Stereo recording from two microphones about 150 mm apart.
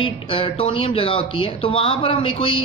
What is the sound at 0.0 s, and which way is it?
Speech, 35° left (ahead or behind).